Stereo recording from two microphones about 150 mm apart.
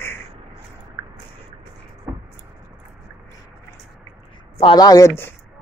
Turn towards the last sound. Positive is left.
turn(degrees=20)  # may be behind; listen again after turning